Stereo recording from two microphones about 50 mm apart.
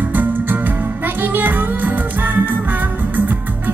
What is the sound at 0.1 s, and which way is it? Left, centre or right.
Music, right.